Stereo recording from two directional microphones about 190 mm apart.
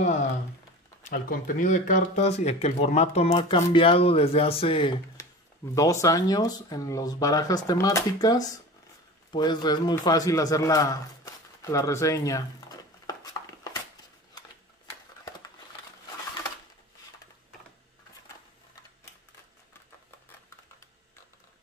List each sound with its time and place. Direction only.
1.0 s speech: 45° left (ahead or behind); by 4.9 s 30° left (ahead or behind)
5.8 s a man's voice: 15° left (ahead or behind)